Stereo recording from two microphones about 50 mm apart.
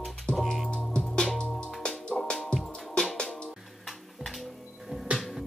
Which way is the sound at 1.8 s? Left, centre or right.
Centre.